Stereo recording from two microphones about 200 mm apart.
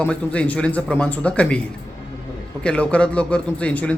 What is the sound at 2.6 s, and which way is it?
Speech, 5° left (ahead or behind).